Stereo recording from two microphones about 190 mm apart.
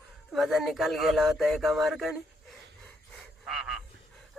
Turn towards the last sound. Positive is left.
turn(degrees=0)  # may be behind; listen again after turning